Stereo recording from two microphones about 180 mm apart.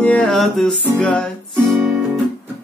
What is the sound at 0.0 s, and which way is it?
Music, 5° left (ahead or behind).